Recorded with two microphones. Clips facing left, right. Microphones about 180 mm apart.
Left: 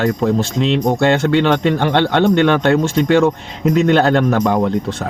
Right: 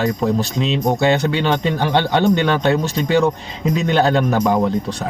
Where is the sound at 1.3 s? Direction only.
65° left (ahead or behind).